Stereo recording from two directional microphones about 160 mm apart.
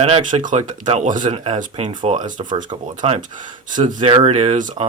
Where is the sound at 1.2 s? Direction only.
30° right (ahead or behind).